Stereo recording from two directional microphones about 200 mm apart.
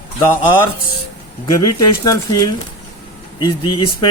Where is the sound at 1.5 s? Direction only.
20° left (ahead or behind).